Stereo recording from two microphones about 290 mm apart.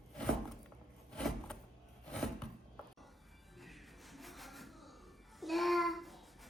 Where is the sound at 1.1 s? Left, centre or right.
Centre.